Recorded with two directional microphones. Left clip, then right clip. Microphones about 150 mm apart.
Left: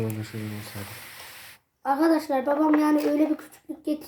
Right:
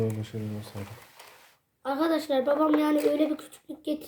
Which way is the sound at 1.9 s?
35° right (ahead or behind).